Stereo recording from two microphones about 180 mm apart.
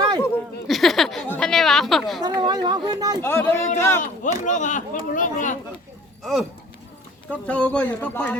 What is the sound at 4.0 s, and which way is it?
Speech, 45° left (ahead or behind).